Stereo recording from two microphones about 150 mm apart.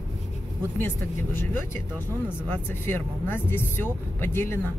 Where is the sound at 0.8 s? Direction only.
15° left (ahead or behind).